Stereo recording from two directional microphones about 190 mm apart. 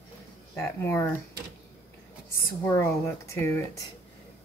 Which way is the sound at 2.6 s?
15° left (ahead or behind).